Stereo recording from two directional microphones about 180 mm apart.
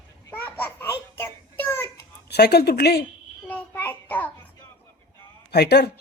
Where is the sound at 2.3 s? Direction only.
60° left (ahead or behind).